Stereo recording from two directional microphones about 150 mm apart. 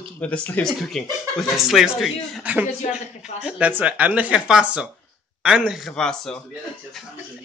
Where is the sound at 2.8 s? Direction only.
50° left (ahead or behind).